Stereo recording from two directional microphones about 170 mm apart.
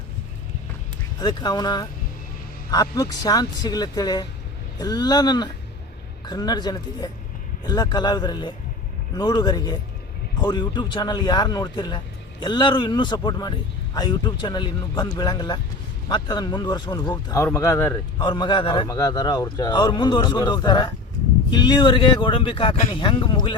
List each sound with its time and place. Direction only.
1.2 s a man's voice: 25° left (ahead or behind)
18.3 s a man's voice: 25° left (ahead or behind)